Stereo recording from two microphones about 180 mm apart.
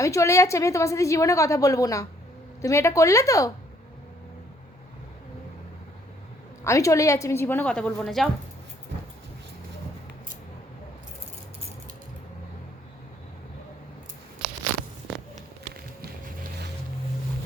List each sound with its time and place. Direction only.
0.0 s a woman's voice: 15° left (ahead or behind)
6.7 s a woman's voice: 15° left (ahead or behind); by 8.3 s centre (ahead or behind)
16.0 s boat: 60° right (ahead or behind)